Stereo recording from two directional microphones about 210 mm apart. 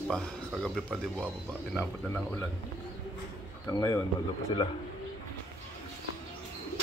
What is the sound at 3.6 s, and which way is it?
Speech, 15° left (ahead or behind).